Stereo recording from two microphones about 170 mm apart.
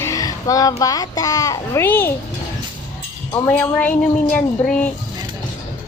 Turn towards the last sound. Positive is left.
turn(degrees=10)  # may be behind; listen again after turning